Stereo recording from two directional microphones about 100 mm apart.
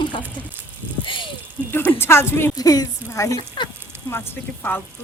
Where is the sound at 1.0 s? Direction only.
55° left (ahead or behind).